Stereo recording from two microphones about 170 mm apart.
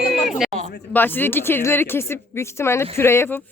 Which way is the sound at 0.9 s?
10° left (ahead or behind).